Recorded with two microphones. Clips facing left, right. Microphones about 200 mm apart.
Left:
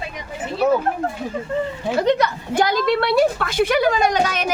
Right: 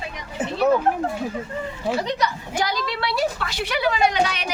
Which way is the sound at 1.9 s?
55° left (ahead or behind).